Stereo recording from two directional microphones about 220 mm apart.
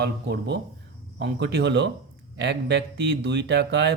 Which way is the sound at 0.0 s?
50° right (ahead or behind).